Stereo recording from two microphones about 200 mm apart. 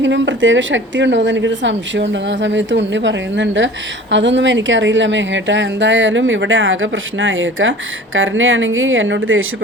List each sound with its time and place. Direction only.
0.0 s a woman's voice: 65° right (ahead or behind); by 9.6 s 80° right